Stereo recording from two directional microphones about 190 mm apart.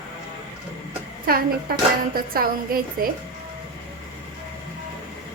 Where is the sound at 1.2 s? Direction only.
50° right (ahead or behind).